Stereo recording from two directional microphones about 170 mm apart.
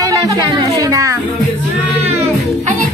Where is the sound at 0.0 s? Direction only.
20° right (ahead or behind).